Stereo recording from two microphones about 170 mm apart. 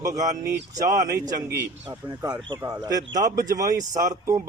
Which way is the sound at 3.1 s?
50° right (ahead or behind).